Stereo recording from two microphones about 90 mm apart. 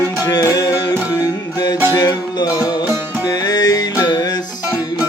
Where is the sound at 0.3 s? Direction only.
40° left (ahead or behind).